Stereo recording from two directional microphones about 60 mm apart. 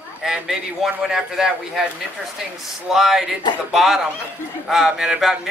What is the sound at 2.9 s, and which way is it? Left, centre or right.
Speech, centre.